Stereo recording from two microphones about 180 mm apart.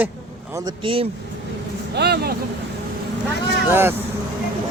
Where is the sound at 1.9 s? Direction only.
65° right (ahead or behind).